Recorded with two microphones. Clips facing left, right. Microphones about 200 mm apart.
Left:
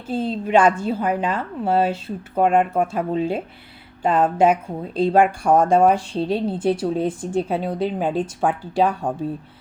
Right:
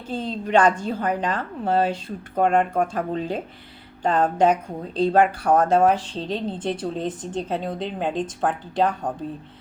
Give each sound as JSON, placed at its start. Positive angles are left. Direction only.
{"t": 0.1, "sound": "speech", "side_deg": 10}